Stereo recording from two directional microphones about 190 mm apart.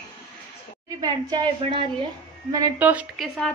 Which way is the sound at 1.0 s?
20° right (ahead or behind).